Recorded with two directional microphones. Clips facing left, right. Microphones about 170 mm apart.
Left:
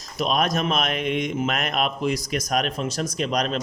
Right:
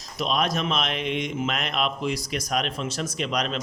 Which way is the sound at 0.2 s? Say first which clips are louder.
Left 2 dB; 45° left (ahead or behind).